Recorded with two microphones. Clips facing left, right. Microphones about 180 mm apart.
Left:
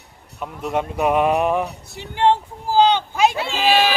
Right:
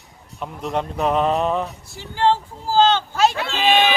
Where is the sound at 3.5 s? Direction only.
5° left (ahead or behind).